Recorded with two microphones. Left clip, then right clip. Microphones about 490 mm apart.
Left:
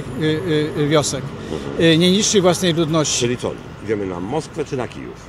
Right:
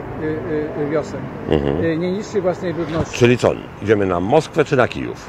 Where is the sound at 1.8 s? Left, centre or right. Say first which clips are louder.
Left 6 dB; left.